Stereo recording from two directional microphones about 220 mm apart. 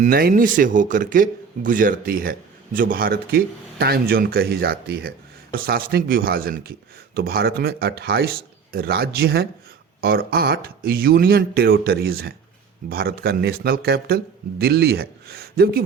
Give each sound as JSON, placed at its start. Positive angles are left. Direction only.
{"t": 0.0, "sound": "speech", "side_deg": -40}